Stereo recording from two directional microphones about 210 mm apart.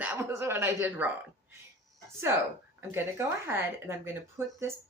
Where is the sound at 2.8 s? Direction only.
10° right (ahead or behind).